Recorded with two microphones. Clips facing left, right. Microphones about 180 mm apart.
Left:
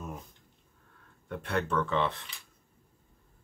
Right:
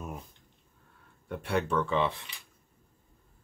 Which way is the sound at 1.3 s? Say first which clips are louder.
Right 1 dB; 10° right (ahead or behind).